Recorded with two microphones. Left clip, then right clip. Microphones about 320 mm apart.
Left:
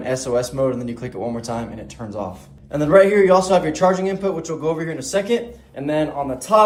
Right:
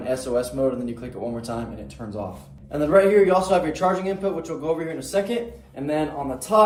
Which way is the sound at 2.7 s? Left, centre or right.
Left.